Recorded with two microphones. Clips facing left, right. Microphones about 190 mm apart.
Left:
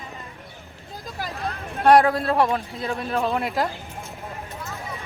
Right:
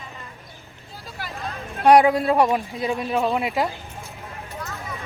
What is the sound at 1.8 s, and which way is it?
Speech, 10° right (ahead or behind).